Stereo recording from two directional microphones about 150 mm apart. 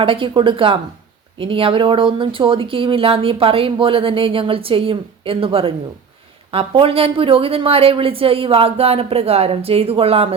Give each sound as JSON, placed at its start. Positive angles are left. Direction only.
{"t": 0.0, "sound": "speech", "side_deg": -35}